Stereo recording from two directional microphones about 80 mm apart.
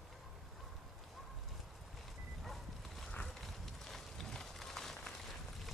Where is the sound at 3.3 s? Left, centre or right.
Centre.